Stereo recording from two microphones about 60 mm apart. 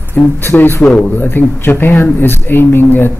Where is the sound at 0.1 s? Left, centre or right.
Left.